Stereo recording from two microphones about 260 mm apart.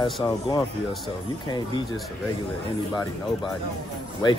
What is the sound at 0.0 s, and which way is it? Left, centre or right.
Speech, centre.